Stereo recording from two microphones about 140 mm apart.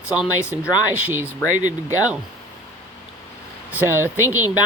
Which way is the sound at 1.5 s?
60° right (ahead or behind).